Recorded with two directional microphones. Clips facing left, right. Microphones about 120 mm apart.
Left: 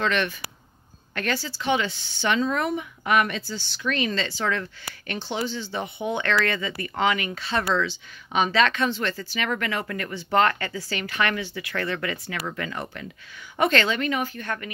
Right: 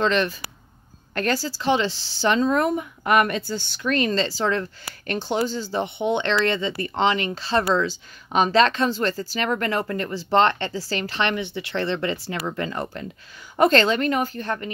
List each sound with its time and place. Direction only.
0.0 s speech: 30° right (ahead or behind)